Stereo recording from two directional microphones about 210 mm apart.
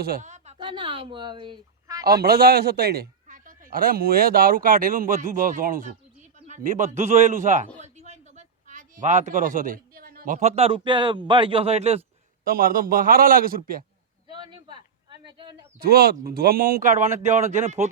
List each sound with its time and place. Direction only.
0.0 s speech: 40° right (ahead or behind); by 2.0 s 20° right (ahead or behind)
2.2 s a man's voice: 45° right (ahead or behind); by 12.0 s 30° right (ahead or behind)
12.5 s a man's voice: 40° right (ahead or behind)
14.3 s a sound: 20° right (ahead or behind)
15.8 s a man's voice: 45° right (ahead or behind)